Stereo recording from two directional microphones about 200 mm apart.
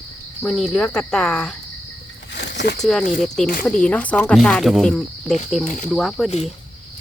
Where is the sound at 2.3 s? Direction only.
60° left (ahead or behind).